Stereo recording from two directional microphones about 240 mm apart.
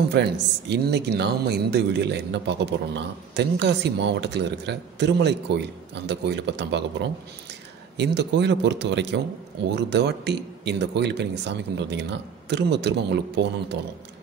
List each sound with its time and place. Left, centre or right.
0.1 s speech: right
8.0 s speech: right